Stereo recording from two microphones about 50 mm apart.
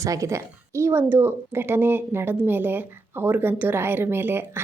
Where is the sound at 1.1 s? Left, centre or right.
Right.